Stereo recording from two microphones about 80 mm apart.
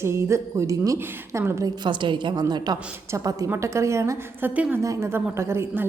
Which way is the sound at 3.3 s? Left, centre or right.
Right.